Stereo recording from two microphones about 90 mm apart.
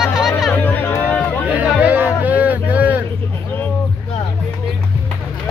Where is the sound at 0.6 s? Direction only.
20° left (ahead or behind).